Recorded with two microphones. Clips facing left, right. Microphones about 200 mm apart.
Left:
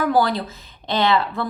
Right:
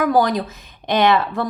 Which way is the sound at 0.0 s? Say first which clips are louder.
Right 2 dB; 15° right (ahead or behind).